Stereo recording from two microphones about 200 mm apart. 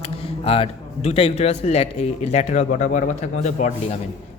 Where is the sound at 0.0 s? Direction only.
30° left (ahead or behind).